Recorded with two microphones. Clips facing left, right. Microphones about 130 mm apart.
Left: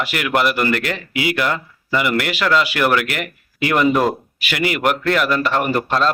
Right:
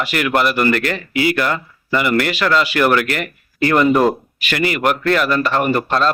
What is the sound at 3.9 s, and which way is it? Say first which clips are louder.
Speech: right 3 dB; 5° right (ahead or behind).